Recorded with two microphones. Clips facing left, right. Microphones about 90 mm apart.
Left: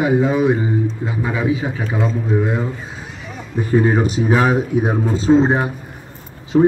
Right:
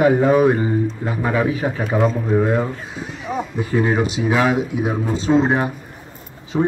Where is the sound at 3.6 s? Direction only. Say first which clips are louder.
Left 4 dB; 30° left (ahead or behind).